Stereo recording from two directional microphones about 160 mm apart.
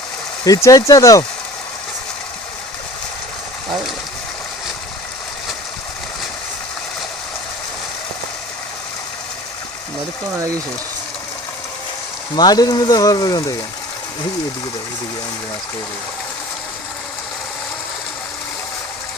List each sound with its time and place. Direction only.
0.4 s speech: 20° left (ahead or behind)
12.4 s speech: 25° left (ahead or behind)